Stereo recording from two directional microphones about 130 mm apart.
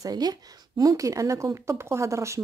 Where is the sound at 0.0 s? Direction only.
30° right (ahead or behind).